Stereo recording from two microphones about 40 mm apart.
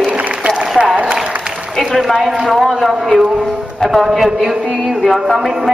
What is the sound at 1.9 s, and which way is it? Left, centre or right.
Speech, centre.